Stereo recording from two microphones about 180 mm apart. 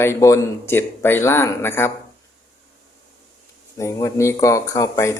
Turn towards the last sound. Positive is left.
turn(degrees=15)  # may be behind; listen again after turning